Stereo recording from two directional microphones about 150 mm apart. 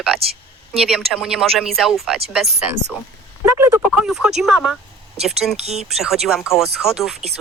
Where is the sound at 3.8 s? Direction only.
Centre (ahead or behind).